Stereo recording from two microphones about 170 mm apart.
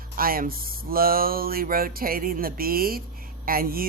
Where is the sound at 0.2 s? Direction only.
60° right (ahead or behind).